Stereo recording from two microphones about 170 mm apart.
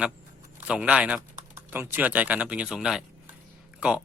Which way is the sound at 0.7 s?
5° right (ahead or behind).